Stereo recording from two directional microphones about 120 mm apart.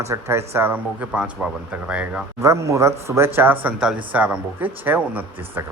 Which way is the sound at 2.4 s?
25° right (ahead or behind).